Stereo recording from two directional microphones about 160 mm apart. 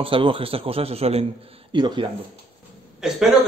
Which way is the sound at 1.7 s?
30° right (ahead or behind).